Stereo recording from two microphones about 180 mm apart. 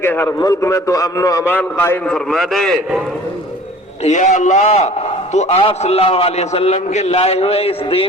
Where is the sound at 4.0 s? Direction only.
40° left (ahead or behind).